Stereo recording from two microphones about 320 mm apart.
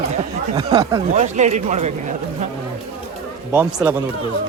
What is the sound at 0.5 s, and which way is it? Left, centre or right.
Speech, centre.